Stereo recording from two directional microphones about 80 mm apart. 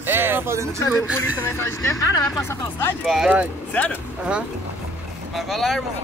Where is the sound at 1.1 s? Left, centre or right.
Left.